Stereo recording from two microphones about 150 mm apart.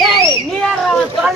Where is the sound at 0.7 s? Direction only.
Centre (ahead or behind).